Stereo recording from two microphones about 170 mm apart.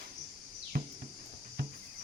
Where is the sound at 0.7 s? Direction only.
60° right (ahead or behind).